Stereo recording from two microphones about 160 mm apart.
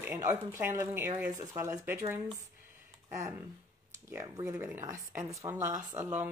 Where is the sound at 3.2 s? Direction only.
20° right (ahead or behind).